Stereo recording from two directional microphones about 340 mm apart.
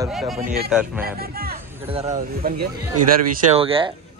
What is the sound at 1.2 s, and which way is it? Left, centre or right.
A man's voice, right.